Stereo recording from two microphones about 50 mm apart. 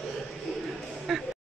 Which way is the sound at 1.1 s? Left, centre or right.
Centre.